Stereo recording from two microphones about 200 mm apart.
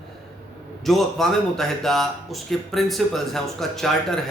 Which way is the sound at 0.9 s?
Centre (ahead or behind).